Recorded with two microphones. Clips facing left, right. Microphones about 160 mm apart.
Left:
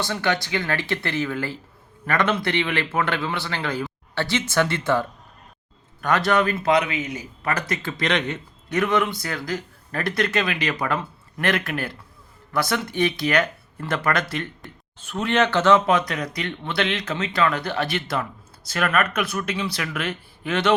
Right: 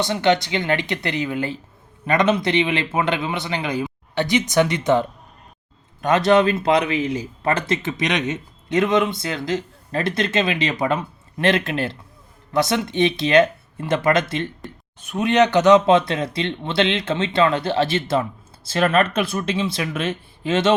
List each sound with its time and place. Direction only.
0.0 s a man's voice: 20° right (ahead or behind)